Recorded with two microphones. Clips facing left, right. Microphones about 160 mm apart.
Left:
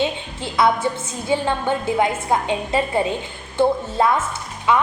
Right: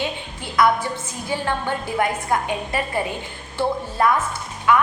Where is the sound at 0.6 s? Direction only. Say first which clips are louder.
Left 1 dB; 25° left (ahead or behind).